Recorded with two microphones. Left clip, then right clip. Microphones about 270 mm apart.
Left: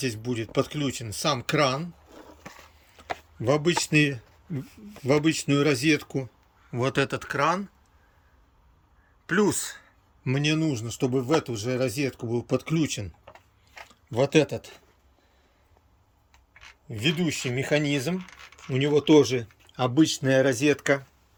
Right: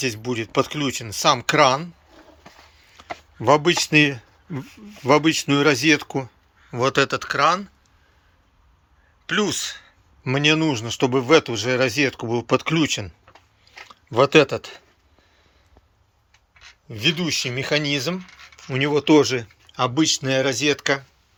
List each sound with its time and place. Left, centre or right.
0.0 s speech: centre
9.2 s speech: left
10.2 s speech: centre
13.7 s chewing: centre
16.6 s speech: centre